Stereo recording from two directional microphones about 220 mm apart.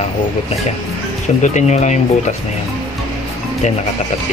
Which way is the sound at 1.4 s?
30° left (ahead or behind).